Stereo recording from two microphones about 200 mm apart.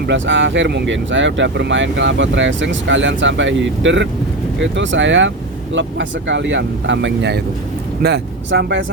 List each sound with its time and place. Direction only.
0.1 s speech: 65° right (ahead or behind)